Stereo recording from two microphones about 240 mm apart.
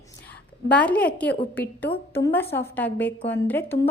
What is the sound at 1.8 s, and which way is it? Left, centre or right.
Speech, left.